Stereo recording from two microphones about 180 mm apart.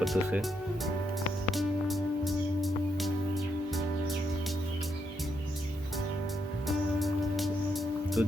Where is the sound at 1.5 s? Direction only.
Centre (ahead or behind).